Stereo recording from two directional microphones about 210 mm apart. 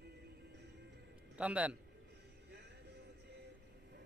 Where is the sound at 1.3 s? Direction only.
5° right (ahead or behind).